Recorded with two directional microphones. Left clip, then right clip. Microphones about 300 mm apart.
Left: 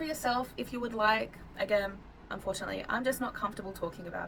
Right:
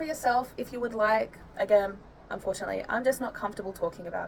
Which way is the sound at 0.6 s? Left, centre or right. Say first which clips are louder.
Right 4 dB; centre.